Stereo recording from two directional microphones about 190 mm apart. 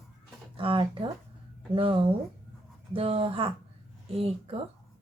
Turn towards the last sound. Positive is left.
turn(degrees=-30)  # may be behind; listen again after turning